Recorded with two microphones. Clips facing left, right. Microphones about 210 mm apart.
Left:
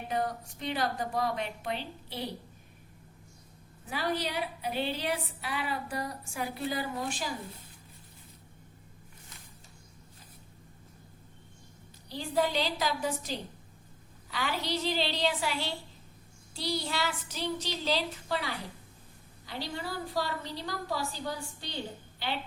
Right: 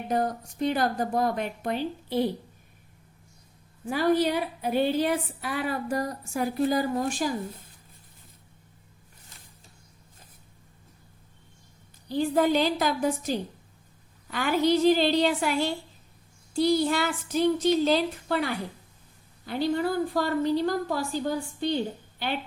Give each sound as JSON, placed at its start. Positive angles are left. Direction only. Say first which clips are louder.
{"t": 0.1, "sound": "a woman's voice", "louder": "right 5 dB", "side_deg": -45}
{"t": 3.8, "sound": "a woman's voice", "louder": "right 10 dB", "side_deg": -50}
{"t": 12.0, "sound": "a woman's voice", "louder": "right 7 dB", "side_deg": -50}